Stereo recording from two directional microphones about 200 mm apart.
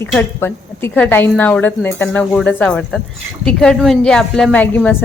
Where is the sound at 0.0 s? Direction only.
10° left (ahead or behind).